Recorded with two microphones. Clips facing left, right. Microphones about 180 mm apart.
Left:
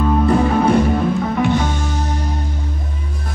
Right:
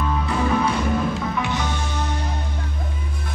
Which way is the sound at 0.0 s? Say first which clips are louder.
Left 8 dB; 50° left (ahead or behind).